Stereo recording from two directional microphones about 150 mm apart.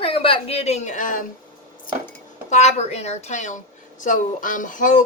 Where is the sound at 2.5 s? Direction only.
50° left (ahead or behind).